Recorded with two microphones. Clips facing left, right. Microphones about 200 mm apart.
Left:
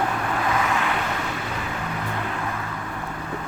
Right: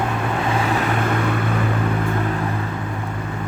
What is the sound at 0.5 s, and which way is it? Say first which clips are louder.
Vehicle: right 3 dB; 30° right (ahead or behind).